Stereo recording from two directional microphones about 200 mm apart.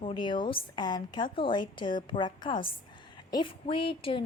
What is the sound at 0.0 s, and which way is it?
A woman's voice, 25° left (ahead or behind).